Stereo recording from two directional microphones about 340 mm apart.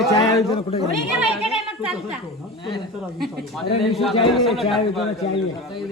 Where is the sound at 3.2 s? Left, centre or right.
Centre.